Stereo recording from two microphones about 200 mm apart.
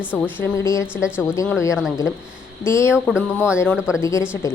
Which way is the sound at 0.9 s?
5° right (ahead or behind).